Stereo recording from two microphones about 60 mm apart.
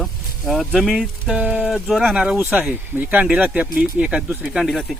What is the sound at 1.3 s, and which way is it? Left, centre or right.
Speech, right.